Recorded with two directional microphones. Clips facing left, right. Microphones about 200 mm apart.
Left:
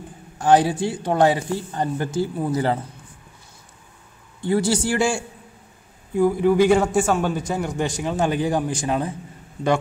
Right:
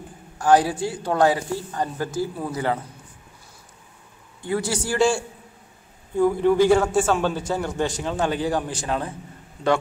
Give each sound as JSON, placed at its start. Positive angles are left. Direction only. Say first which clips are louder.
{"t": 0.4, "sound": "speech", "louder": "left 1 dB", "side_deg": 25}
{"t": 4.5, "sound": "a man's voice", "louder": "left 5 dB", "side_deg": 30}
{"t": 4.9, "sound": "a man's voice", "louder": "right 1 dB", "side_deg": 10}